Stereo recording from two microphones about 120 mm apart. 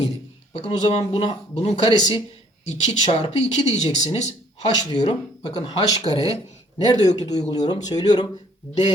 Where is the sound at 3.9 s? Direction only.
70° left (ahead or behind).